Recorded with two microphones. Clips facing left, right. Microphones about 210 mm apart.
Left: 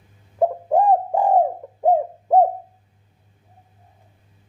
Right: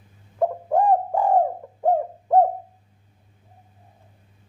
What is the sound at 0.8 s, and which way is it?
Bird, 20° left (ahead or behind).